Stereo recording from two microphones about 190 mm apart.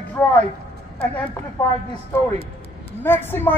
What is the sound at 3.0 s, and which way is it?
Speech, 10° left (ahead or behind).